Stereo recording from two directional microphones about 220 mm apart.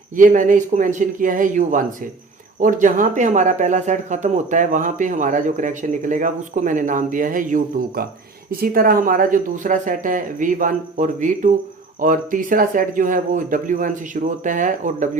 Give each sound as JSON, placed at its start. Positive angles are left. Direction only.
{"t": 0.2, "sound": "speech", "side_deg": -35}